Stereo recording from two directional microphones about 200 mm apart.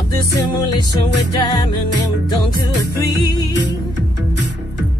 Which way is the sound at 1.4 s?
20° left (ahead or behind).